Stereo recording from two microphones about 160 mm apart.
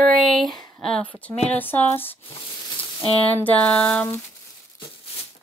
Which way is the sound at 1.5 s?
10° left (ahead or behind).